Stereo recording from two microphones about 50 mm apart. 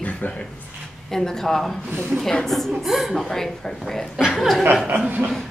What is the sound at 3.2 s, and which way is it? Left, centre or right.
A woman's voice, centre.